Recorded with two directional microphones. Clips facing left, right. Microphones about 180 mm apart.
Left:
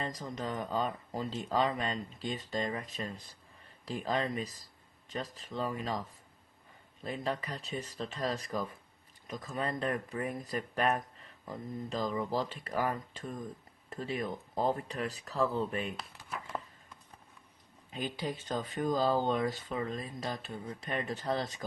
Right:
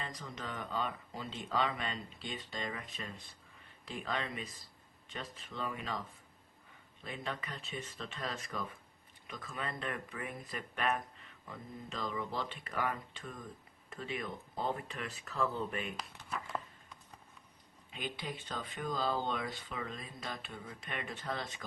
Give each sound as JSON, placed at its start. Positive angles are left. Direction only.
{"t": 0.0, "sound": "speech", "side_deg": 40}
{"t": 16.0, "sound": "speech", "side_deg": 0}
{"t": 17.9, "sound": "speech", "side_deg": 40}